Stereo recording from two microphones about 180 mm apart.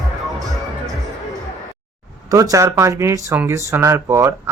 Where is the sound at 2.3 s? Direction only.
20° right (ahead or behind).